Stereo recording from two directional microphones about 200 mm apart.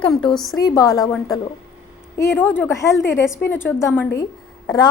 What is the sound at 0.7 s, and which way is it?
Speech, 20° left (ahead or behind).